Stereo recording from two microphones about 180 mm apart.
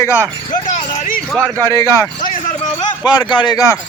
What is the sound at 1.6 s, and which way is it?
Speech, 15° left (ahead or behind).